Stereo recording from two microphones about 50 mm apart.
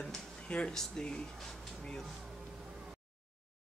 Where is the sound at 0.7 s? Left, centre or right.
Centre.